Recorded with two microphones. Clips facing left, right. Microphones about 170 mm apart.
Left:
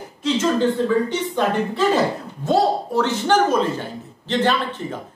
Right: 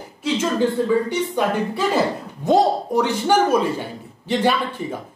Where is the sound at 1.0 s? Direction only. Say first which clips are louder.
Even; 10° right (ahead or behind).